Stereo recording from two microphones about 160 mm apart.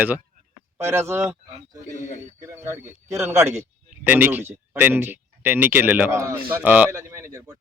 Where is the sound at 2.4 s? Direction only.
15° right (ahead or behind).